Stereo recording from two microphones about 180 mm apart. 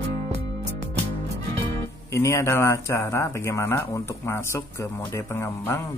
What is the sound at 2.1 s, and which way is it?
Speech, 15° left (ahead or behind).